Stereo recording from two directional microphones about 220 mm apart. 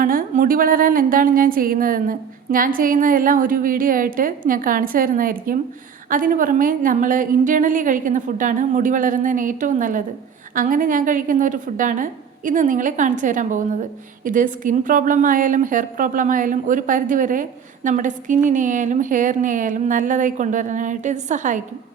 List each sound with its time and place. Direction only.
0.0 s a woman's voice: 40° right (ahead or behind)